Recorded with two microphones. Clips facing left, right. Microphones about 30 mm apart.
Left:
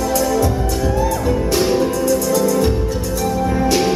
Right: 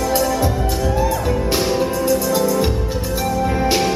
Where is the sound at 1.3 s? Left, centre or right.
Centre.